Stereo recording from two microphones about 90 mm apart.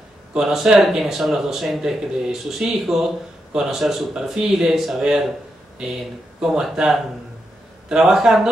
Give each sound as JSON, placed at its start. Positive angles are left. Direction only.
{"t": 0.3, "sound": "speech", "side_deg": -5}
{"t": 6.4, "sound": "speech", "side_deg": -10}